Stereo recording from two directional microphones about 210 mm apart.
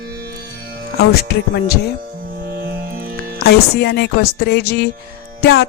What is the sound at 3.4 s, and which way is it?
Speech, 50° left (ahead or behind).